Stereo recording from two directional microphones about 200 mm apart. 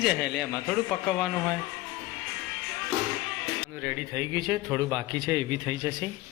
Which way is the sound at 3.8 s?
10° right (ahead or behind).